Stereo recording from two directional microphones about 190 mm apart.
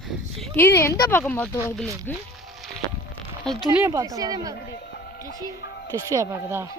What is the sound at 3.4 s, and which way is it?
Speech, 25° right (ahead or behind).